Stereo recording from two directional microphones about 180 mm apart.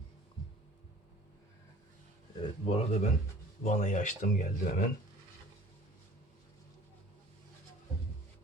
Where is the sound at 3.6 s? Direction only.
45° left (ahead or behind).